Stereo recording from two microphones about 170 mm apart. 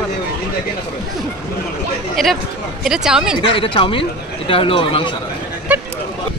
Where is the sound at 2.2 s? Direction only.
Centre (ahead or behind).